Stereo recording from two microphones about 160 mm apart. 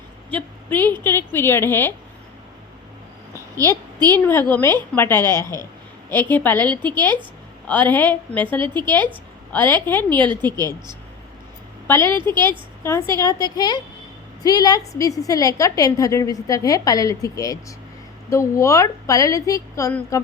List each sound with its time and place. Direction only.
0.3 s a woman's voice: 10° left (ahead or behind)
3.3 s a sound: 20° right (ahead or behind)
4.1 s a woman's voice: 15° left (ahead or behind)
10.6 s speech: 25° right (ahead or behind)
11.9 s a woman's voice: 15° left (ahead or behind)